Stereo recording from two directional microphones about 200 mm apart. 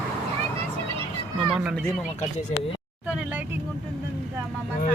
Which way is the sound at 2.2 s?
35° left (ahead or behind).